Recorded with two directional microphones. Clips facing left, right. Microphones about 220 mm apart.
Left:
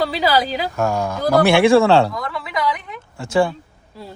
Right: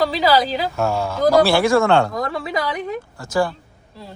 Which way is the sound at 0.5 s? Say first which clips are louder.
Even; 15° left (ahead or behind).